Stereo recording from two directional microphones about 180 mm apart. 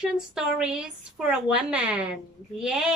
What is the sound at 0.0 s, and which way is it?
A woman's voice, 5° right (ahead or behind).